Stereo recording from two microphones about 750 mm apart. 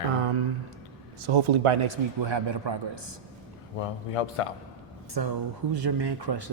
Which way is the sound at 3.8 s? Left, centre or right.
Left.